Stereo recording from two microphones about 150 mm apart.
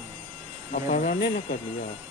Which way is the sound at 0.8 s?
65° left (ahead or behind).